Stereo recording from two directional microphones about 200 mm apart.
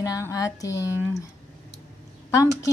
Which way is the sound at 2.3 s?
15° left (ahead or behind).